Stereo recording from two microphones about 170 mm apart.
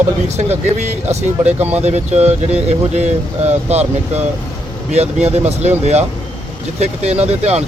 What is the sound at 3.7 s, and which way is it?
Speech, 40° right (ahead or behind).